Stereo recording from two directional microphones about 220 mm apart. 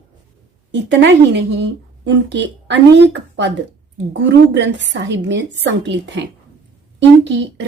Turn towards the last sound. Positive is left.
turn(degrees=-55)  # may be behind; listen again after turning